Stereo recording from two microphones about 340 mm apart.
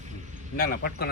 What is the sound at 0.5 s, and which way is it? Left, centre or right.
Speech, left.